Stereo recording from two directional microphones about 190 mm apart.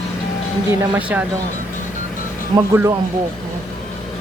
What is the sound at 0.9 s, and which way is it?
Speech, 10° right (ahead or behind).